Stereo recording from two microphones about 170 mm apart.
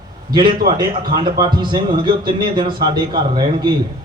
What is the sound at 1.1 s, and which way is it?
A man's voice, 30° right (ahead or behind).